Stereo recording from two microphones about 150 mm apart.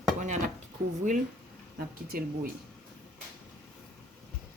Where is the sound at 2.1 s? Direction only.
75° right (ahead or behind).